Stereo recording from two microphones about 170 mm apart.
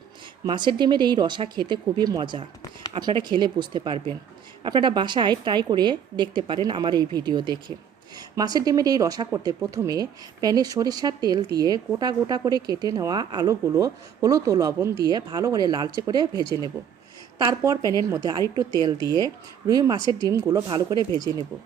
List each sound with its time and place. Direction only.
0.4 s speech: 25° right (ahead or behind)
16.5 s speech: 25° left (ahead or behind)
17.3 s speech: 20° right (ahead or behind)
20.0 s speech: 25° left (ahead or behind)
20.2 s speech: 20° right (ahead or behind)